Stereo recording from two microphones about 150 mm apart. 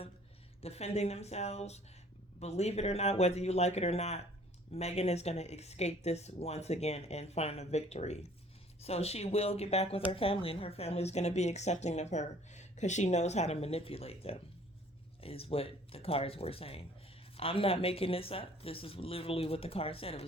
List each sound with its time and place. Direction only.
0.6 s speech: 45° left (ahead or behind)